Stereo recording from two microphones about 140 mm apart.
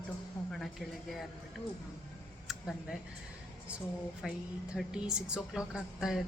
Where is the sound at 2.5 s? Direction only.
Centre (ahead or behind).